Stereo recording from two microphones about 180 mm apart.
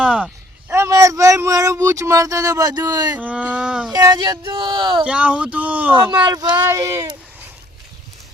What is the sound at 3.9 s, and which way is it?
Speech, 20° right (ahead or behind).